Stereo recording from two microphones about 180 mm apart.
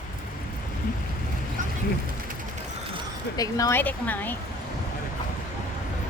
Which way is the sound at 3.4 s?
20° left (ahead or behind).